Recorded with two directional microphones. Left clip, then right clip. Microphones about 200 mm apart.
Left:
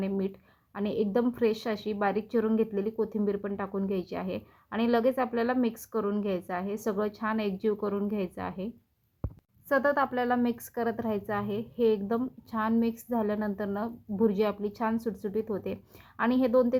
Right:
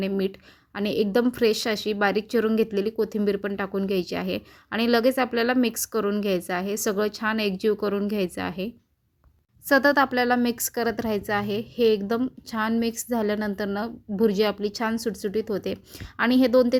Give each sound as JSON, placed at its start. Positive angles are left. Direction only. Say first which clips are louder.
{"t": 0.0, "sound": "a woman's voice", "louder": "right 6 dB", "side_deg": -35}